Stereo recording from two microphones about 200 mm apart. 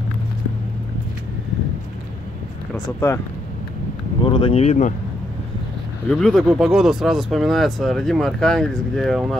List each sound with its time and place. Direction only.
2.7 s speech: 10° left (ahead or behind)
4.2 s speech: 25° left (ahead or behind)
6.0 s speech: centre (ahead or behind)